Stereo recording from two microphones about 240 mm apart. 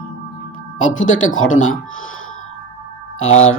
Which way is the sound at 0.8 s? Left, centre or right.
Left.